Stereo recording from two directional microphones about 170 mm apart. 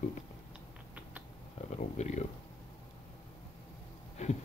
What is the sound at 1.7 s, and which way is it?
Speech, 40° left (ahead or behind).